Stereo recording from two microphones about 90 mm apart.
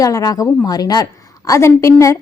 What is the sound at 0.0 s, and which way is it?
A woman's voice, 45° left (ahead or behind).